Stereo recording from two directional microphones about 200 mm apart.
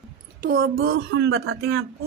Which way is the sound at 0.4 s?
45° right (ahead or behind).